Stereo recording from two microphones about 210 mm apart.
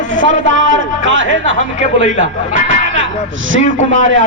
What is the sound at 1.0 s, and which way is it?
Music, 65° right (ahead or behind).